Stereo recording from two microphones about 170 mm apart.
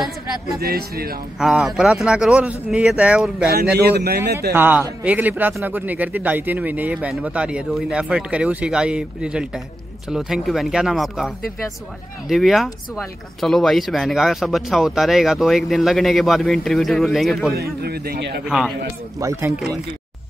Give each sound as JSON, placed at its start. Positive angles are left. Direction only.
{"t": 0.6, "sound": "a man's voice", "side_deg": -65}
{"t": 1.4, "sound": "speech", "side_deg": 0}
{"t": 3.7, "sound": "speech", "side_deg": -70}
{"t": 4.5, "sound": "a man's voice", "side_deg": -10}
{"t": 17.6, "sound": "speech", "side_deg": -65}
{"t": 18.4, "sound": "speech", "side_deg": -5}
{"t": 19.1, "sound": "speech", "side_deg": -20}